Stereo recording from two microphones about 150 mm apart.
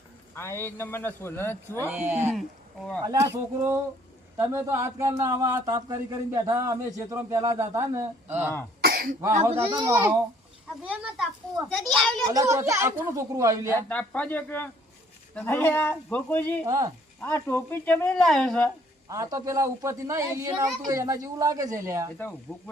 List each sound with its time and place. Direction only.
0.3 s speech: 15° left (ahead or behind)
1.9 s speech: 15° right (ahead or behind)
8.8 s cough: 90° right
9.3 s speech: 45° right (ahead or behind)
9.7 s speech: 20° right (ahead or behind)
11.7 s a child's voice: centre (ahead or behind)
12.3 s speech: 20° right (ahead or behind)
13.8 s speech: 10° left (ahead or behind)
16.6 s speech: 25° right (ahead or behind)
17.2 s speech: 15° left (ahead or behind)
19.0 s speech: 20° right (ahead or behind)
22.2 s speech: 15° left (ahead or behind)